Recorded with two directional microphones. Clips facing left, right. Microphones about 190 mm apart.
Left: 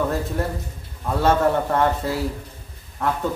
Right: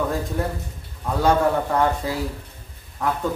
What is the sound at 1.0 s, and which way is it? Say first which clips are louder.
A man's voice: even; centre (ahead or behind).